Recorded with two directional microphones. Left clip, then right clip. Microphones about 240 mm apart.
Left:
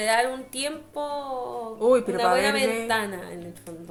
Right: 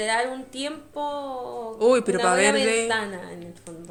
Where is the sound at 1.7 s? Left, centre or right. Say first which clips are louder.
Right 1 dB; right.